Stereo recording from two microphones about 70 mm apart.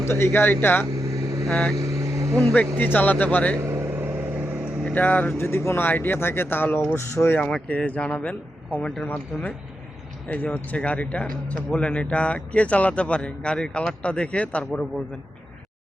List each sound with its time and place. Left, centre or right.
0.1 s speech: left
1.1 s vehicle: right
1.5 s speech: centre
1.7 s vehicle: right
2.4 s speech: centre
3.6 s vehicle: right
4.0 s vehicle: right
4.8 s speech: centre
5.4 s speech: left
7.7 s speech: centre